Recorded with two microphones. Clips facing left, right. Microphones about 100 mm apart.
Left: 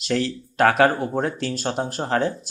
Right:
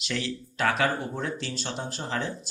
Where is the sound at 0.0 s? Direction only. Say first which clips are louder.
Left 8 dB; 45° left (ahead or behind).